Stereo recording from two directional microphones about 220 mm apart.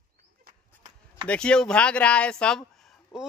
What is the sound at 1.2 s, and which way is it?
Speech, 5° left (ahead or behind).